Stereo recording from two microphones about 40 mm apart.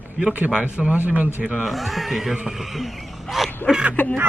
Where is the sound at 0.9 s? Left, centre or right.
Right.